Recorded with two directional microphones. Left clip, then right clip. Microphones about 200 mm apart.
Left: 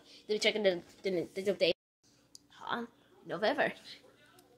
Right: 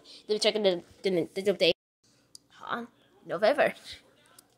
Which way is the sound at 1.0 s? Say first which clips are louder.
Right 7 dB; 35° right (ahead or behind).